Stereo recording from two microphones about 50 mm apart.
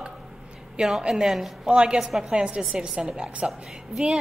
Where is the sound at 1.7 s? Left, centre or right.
Centre.